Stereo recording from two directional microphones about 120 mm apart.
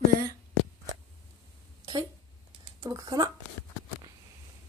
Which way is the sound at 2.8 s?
30° right (ahead or behind).